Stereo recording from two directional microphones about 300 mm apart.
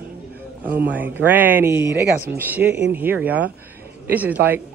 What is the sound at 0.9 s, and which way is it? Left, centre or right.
Speech, centre.